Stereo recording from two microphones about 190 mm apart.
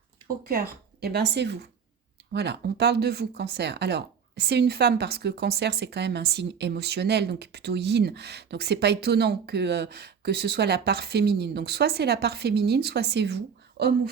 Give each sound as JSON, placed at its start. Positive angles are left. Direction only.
{"t": 0.3, "sound": "speech", "side_deg": -50}